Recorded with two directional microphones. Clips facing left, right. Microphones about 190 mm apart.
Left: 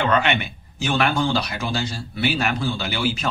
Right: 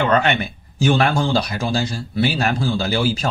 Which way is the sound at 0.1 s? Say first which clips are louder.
Right 3 dB; 35° right (ahead or behind).